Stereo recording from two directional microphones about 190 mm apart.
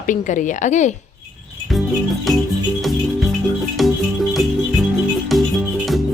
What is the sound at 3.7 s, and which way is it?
Music, centre (ahead or behind).